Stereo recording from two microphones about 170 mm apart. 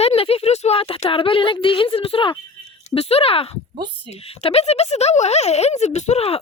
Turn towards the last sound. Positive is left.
turn(degrees=35)  # may be behind; listen again after turning